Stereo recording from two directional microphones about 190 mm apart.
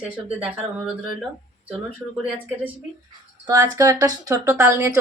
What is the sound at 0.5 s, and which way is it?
Speech, 5° right (ahead or behind).